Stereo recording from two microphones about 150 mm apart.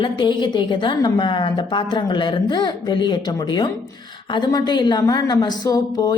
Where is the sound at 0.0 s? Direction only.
30° left (ahead or behind).